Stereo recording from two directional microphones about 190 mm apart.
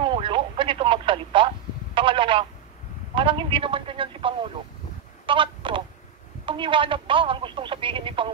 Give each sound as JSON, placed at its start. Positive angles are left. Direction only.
{"t": 0.0, "sound": "radio", "side_deg": -25}
{"t": 2.0, "sound": "telephone", "side_deg": -25}
{"t": 3.2, "sound": "speech", "side_deg": -25}
{"t": 5.2, "sound": "telephone", "side_deg": -25}
{"t": 6.4, "sound": "speech", "side_deg": -25}